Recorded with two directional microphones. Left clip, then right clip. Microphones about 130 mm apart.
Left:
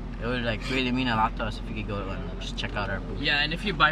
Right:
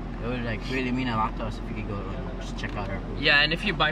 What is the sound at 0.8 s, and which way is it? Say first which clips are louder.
Speech: left 2 dB; centre (ahead or behind).